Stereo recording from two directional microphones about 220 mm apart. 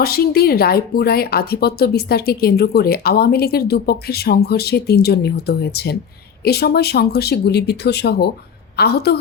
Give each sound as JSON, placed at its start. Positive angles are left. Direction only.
{"t": 0.0, "sound": "a woman's voice", "side_deg": 45}